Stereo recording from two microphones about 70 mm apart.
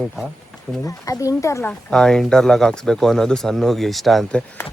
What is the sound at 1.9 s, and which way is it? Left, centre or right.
Speech, centre.